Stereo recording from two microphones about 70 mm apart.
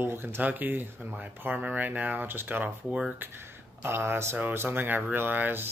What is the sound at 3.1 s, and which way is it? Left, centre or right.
Speech, right.